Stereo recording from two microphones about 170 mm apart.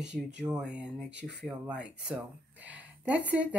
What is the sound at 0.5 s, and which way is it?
Speech, 5° right (ahead or behind).